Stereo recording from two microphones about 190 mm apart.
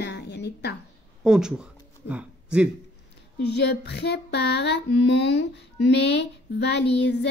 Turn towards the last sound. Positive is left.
turn(degrees=65)  # may be behind; listen again after turning